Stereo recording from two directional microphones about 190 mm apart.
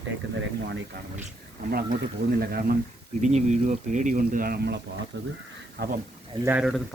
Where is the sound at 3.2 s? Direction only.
40° right (ahead or behind); by 4.8 s 55° right (ahead or behind).